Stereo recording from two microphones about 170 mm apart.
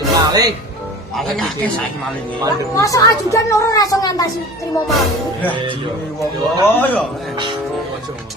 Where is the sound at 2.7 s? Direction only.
20° left (ahead or behind).